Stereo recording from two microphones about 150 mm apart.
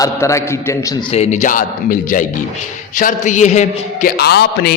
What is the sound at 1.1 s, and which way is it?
A man's voice, 50° left (ahead or behind).